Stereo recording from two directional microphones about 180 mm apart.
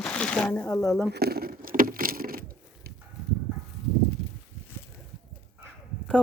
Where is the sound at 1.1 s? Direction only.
60° right (ahead or behind).